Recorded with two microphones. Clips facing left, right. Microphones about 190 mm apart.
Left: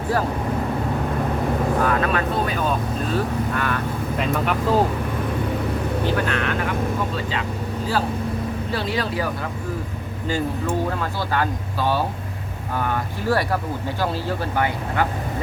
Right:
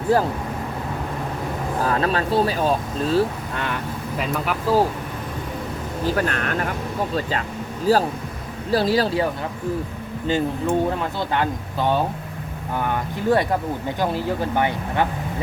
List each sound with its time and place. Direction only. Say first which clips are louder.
1.8 s speech: left 1 dB; 30° right (ahead or behind)
4.2 s speech: left 2 dB; 5° right (ahead or behind)
6.1 s speech: even; 45° right (ahead or behind)
7.9 s speech: right 5 dB; 40° right (ahead or behind)
10.2 s speech: right 3 dB; 20° right (ahead or behind)
13.2 s speech: right 3 dB; 20° right (ahead or behind)